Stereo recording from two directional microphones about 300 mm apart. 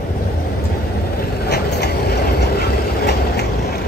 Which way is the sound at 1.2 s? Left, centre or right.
Left.